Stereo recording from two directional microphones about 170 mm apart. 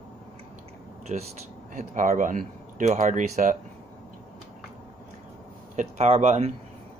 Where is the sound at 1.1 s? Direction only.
45° right (ahead or behind).